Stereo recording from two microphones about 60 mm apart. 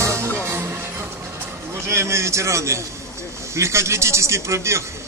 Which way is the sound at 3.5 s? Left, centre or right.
Right.